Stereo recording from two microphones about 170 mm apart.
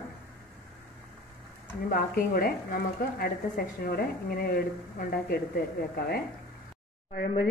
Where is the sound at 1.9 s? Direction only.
55° left (ahead or behind).